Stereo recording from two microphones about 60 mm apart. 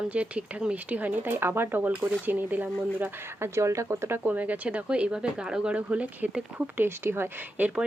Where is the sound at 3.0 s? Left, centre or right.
Right.